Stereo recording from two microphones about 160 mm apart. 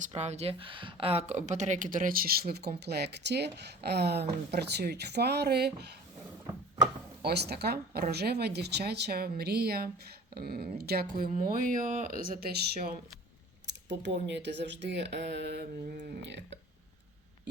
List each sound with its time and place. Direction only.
0.1 s speech: 45° right (ahead or behind); by 5.9 s 90° right
7.2 s speech: 90° right
11.3 s speech: 55° right (ahead or behind)
12.2 s speech: 65° right (ahead or behind)
13.7 s speech: 90° right